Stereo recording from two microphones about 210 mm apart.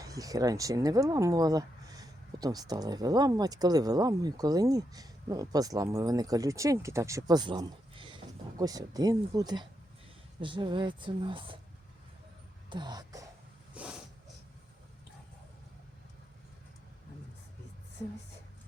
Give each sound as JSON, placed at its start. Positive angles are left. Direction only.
{"t": 0.0, "sound": "speech", "side_deg": -15}
{"t": 12.7, "sound": "speech", "side_deg": -20}
{"t": 13.7, "sound": "snort", "side_deg": -5}